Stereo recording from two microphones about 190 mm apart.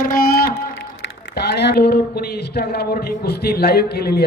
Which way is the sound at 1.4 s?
60° left (ahead or behind).